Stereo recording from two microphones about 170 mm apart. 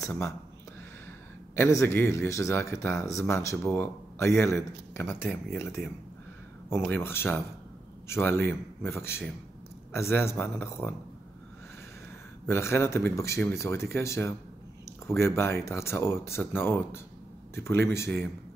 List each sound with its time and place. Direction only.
0.0 s speech: 15° left (ahead or behind)
1.5 s speech: 15° left (ahead or behind)
3.5 s speech: 5° left (ahead or behind)
12.4 s speech: 15° left (ahead or behind)